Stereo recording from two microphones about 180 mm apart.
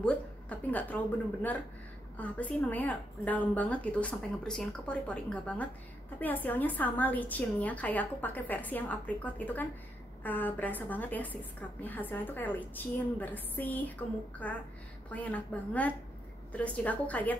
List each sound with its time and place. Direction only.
0.0 s a woman's voice: 5° left (ahead or behind)
2.1 s a woman's voice: 10° left (ahead or behind)